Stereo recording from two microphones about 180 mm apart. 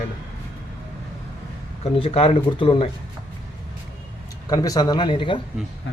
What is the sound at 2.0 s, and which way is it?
Speech, 30° left (ahead or behind).